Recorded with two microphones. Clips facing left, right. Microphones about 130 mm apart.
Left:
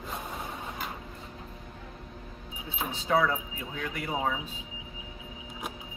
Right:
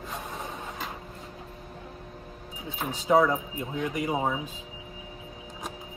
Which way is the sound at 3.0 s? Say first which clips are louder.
Right 5 dB; 15° right (ahead or behind).